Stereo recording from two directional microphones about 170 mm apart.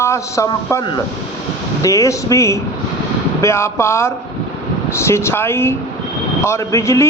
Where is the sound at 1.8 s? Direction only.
20° left (ahead or behind).